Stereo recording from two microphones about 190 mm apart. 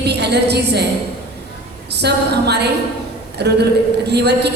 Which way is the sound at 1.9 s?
60° right (ahead or behind).